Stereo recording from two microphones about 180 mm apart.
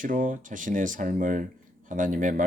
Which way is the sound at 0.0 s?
45° right (ahead or behind).